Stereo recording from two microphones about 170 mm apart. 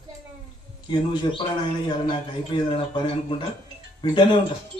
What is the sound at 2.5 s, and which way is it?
Speech, 30° left (ahead or behind).